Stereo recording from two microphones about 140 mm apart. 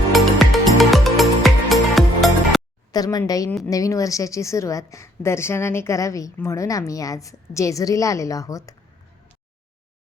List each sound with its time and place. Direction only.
0.1 s music: centre (ahead or behind)
2.9 s a woman's voice: 25° left (ahead or behind)